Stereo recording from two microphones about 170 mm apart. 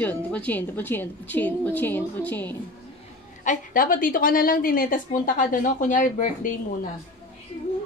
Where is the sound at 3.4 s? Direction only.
55° left (ahead or behind).